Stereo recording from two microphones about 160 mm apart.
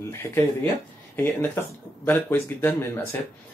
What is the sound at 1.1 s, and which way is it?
Speech, 15° left (ahead or behind).